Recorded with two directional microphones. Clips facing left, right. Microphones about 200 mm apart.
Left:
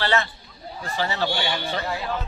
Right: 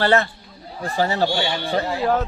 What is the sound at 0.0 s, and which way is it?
Speech, 50° right (ahead or behind).